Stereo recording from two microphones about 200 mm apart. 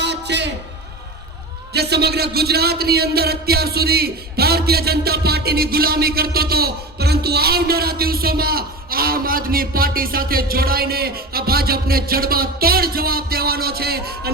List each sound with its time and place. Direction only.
0.0 s music: 60° right (ahead or behind)
1.7 s a man's voice: 55° right (ahead or behind)